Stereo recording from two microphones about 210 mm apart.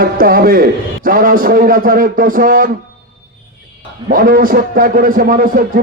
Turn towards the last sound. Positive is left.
turn(degrees=-40)  # may be behind; listen again after turning